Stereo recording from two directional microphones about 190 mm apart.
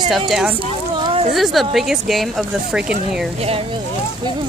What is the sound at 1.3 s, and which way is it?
Speech, centre (ahead or behind).